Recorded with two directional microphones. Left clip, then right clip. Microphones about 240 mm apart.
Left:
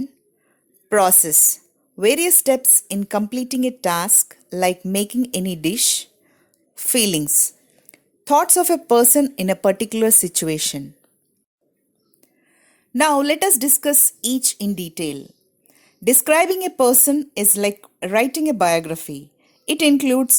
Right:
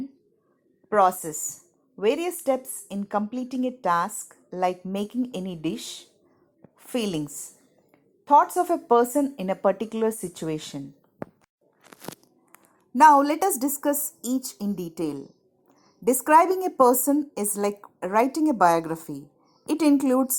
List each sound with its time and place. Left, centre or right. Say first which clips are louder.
0.9 s a woman's voice: left 4 dB; left
13.1 s a woman's voice: right 1 dB; left
13.6 s a woman's voice: left 6 dB; left